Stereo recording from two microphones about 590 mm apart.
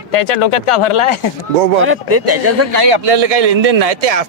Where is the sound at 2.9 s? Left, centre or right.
Right.